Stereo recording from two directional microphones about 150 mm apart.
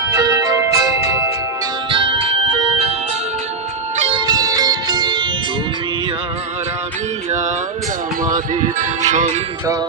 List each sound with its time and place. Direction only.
0.2 s music: 25° right (ahead or behind)
1.9 s music: 35° right (ahead or behind)
3.9 s music: 40° right (ahead or behind)
4.3 s music: 25° right (ahead or behind)
8.8 s music: 55° right (ahead or behind)